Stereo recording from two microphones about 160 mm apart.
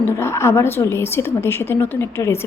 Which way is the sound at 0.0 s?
15° left (ahead or behind).